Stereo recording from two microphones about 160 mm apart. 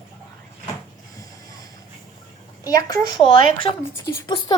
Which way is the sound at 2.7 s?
20° left (ahead or behind).